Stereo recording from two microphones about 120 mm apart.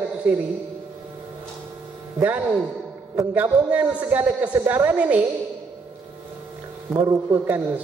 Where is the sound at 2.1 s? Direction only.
15° right (ahead or behind).